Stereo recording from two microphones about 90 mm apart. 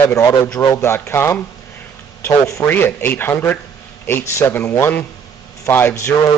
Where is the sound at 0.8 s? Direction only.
25° left (ahead or behind).